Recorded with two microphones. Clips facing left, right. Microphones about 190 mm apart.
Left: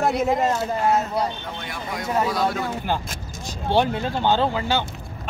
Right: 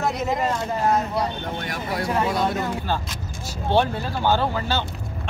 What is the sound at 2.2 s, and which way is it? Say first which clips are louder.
Speech: even; 25° right (ahead or behind).